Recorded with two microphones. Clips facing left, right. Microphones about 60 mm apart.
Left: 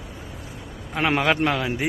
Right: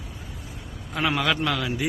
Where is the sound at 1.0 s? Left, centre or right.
Left.